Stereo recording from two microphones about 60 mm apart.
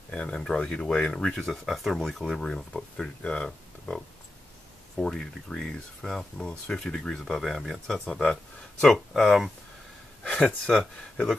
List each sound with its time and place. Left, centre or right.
0.1 s speech: centre
3.2 s speech: centre
8.8 s speech: centre
10.2 s speech: centre